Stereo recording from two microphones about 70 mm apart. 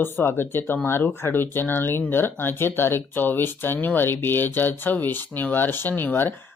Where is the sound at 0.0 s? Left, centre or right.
Left.